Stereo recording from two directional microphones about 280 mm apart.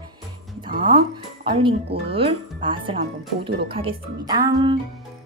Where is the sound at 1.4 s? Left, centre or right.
Centre.